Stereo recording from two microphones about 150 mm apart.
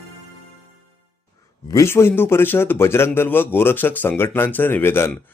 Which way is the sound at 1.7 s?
20° left (ahead or behind).